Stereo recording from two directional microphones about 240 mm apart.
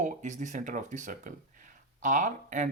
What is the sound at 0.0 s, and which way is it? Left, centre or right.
Speech, right.